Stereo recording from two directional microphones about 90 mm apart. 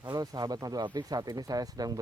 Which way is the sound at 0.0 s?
50° right (ahead or behind).